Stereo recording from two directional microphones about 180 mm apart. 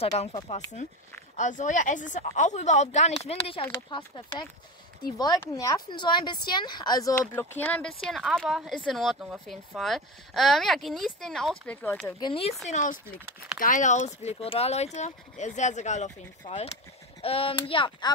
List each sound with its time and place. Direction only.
1.3 s speech: 45° left (ahead or behind); by 7.2 s 20° left (ahead or behind)
7.2 s speech: 10° left (ahead or behind)
12.2 s speech: 30° left (ahead or behind)
12.6 s speech: 45° left (ahead or behind); by 18.1 s 25° left (ahead or behind)